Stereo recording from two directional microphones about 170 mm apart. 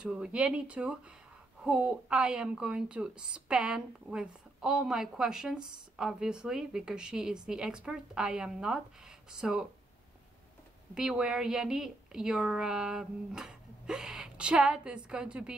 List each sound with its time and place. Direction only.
0.0 s speech: 5° right (ahead or behind)
11.0 s speech: 5° right (ahead or behind)